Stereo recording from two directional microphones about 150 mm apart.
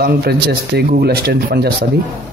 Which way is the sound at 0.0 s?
90° right.